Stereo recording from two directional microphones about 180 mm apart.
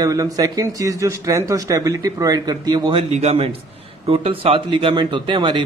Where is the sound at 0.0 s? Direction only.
20° right (ahead or behind).